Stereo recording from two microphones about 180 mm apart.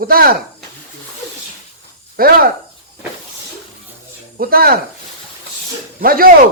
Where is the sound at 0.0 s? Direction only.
55° right (ahead or behind).